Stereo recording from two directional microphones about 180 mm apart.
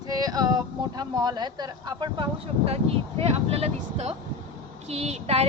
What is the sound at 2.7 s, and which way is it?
Speech, 35° right (ahead or behind).